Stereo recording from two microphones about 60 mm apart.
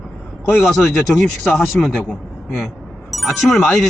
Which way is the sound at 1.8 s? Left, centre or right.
Centre.